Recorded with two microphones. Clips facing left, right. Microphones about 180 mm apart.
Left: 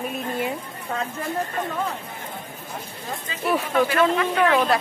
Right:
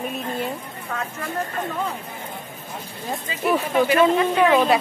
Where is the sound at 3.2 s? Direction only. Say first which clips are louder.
Right 2 dB; 20° right (ahead or behind).